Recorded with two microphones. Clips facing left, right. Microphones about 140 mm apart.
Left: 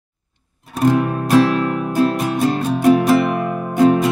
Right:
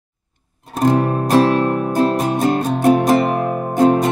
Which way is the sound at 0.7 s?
40° right (ahead or behind).